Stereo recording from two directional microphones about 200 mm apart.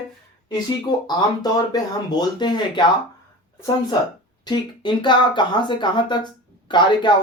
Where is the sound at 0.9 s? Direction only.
20° left (ahead or behind).